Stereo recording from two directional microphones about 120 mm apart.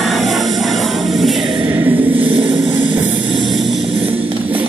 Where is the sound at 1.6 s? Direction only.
25° right (ahead or behind).